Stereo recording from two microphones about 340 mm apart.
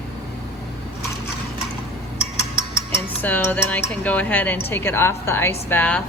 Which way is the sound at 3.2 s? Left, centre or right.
Centre.